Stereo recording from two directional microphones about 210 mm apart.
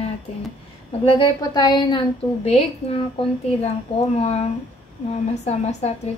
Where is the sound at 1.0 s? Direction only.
25° left (ahead or behind).